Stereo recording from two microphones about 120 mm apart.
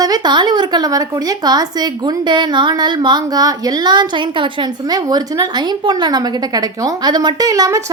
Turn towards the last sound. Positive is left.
turn(degrees=-30)  # may be behind; listen again after turning